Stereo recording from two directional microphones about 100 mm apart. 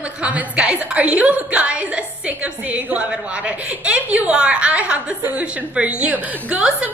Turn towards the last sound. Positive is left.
turn(degrees=-10)  # may be behind; listen again after turning